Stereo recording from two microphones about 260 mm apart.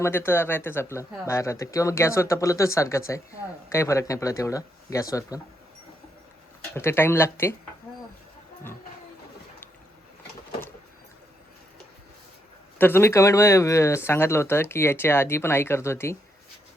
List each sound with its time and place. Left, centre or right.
0.0 s speech: centre
6.7 s speech: centre
12.8 s speech: centre